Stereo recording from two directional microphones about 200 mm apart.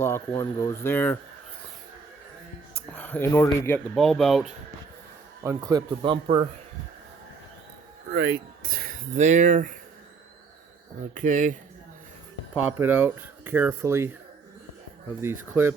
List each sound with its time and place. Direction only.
0.0 s speech: 15° left (ahead or behind)
2.9 s speech: 10° left (ahead or behind)
5.4 s speech: 15° right (ahead or behind)
8.1 s speech: 50° right (ahead or behind)
11.1 s speech: 40° right (ahead or behind)
12.6 s speech: 10° right (ahead or behind)
15.2 s speech: 10° right (ahead or behind)